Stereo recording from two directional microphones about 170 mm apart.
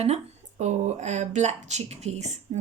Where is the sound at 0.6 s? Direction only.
40° right (ahead or behind).